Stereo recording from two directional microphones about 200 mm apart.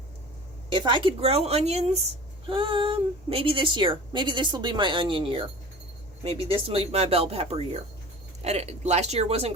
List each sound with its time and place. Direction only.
0.7 s a woman's voice: 25° right (ahead or behind)
6.5 s speech: 30° right (ahead or behind)